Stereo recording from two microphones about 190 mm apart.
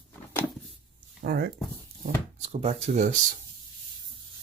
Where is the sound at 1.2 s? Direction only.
55° right (ahead or behind).